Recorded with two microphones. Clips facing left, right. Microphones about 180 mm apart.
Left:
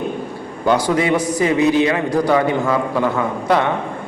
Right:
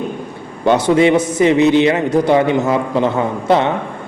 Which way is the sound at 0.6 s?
25° right (ahead or behind).